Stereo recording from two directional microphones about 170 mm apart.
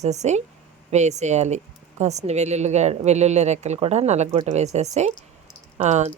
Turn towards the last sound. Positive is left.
turn(degrees=-40)  # may be behind; listen again after turning